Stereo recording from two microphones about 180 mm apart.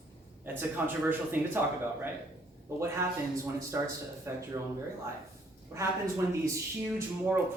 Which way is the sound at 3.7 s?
15° right (ahead or behind).